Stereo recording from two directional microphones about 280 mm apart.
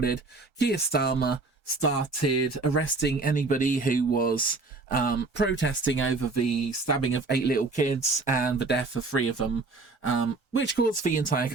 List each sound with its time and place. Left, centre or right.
0.6 s speech: left
1.8 s speech: left
3.0 s speech: left
6.3 s speech: left
7.1 s speech: left